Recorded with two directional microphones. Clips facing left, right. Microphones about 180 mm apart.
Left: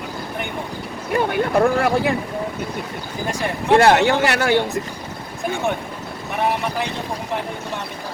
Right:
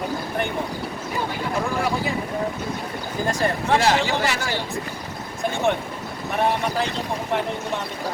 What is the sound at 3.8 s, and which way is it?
Speech, 60° left (ahead or behind).